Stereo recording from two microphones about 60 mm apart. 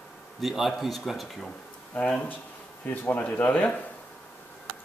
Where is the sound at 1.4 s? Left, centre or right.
Centre.